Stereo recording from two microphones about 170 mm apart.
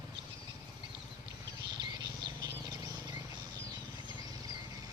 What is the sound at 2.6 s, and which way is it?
Bird, 25° right (ahead or behind).